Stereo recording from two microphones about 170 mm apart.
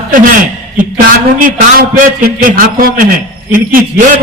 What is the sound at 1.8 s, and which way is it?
A man's voice, 55° right (ahead or behind).